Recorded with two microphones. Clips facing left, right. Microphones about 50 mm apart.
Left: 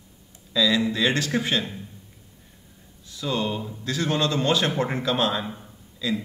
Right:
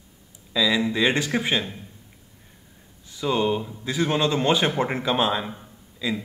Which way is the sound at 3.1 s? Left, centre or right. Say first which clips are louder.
Right 4 dB; right.